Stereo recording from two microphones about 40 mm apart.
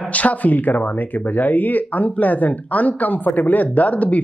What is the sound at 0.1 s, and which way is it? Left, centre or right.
Speech, left.